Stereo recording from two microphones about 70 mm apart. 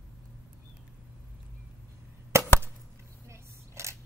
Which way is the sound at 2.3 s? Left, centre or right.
Right.